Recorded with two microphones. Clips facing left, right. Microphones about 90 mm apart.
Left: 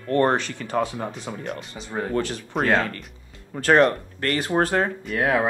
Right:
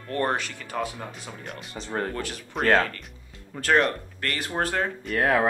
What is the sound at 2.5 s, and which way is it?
Speech, centre (ahead or behind).